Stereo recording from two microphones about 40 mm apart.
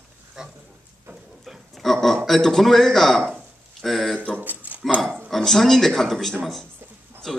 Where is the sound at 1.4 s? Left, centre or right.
Centre.